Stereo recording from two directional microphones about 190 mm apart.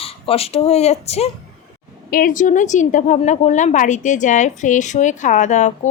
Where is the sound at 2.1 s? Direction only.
45° left (ahead or behind).